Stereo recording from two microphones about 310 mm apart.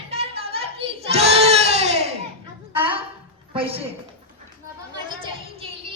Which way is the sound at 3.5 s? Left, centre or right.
Centre.